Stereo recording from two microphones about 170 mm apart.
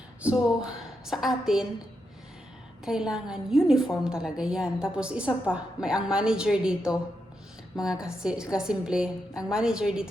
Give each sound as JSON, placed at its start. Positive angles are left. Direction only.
{"t": 0.2, "sound": "a woman's voice", "side_deg": -5}
{"t": 2.8, "sound": "a woman's voice", "side_deg": -5}